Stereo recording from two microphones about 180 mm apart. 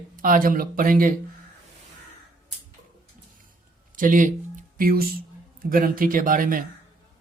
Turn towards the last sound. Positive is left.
turn(degrees=-50)  # may be behind; listen again after turning